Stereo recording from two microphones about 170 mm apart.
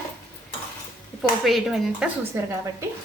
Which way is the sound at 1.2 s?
Centre (ahead or behind).